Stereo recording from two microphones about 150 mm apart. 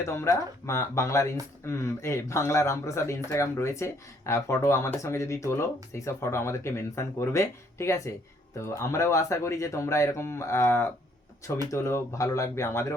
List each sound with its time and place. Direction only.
0.0 s speech: 20° left (ahead or behind)